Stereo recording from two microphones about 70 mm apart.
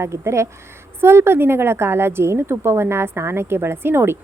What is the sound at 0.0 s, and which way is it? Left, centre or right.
A woman's voice, right.